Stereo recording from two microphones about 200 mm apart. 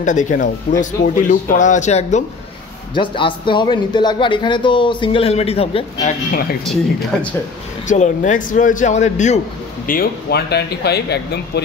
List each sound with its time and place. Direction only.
0.0 s a man's voice: 40° left (ahead or behind)
6.6 s speech: centre (ahead or behind)
7.8 s speech: 40° left (ahead or behind)
9.8 s speech: 50° left (ahead or behind)